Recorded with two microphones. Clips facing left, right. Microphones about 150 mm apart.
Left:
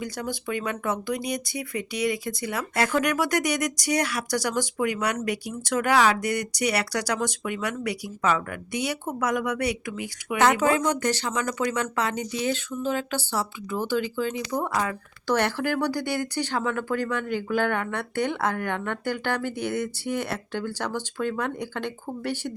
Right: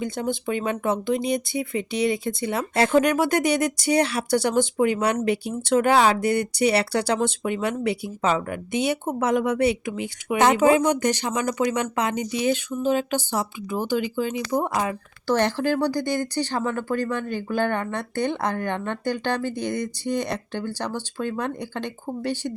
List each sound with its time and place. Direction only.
0.0 s speech: 25° right (ahead or behind)
15.9 s speech: 10° left (ahead or behind)
16.5 s speech: 15° right (ahead or behind)
19.4 s speech: 10° left (ahead or behind)
20.6 s speech: 15° right (ahead or behind)